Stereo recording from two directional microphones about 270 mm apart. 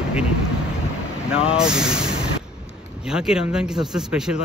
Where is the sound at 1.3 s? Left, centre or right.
Centre.